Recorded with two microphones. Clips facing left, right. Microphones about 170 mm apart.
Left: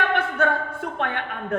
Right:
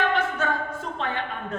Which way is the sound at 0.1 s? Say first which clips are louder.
Left 3 dB; 60° left (ahead or behind).